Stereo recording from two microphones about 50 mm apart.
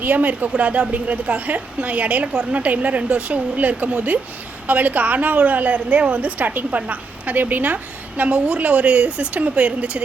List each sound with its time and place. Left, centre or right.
0.0 s a woman's voice: right